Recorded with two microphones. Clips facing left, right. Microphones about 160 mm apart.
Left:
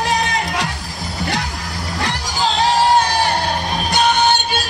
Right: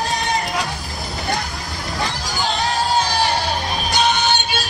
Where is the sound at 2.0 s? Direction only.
90° left.